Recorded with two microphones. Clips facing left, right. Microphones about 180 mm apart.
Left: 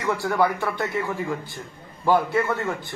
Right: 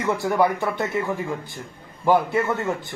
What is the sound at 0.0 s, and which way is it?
Speech, 20° right (ahead or behind).